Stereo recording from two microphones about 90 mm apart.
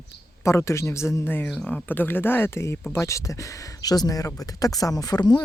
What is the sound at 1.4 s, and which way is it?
Speech, 5° left (ahead or behind).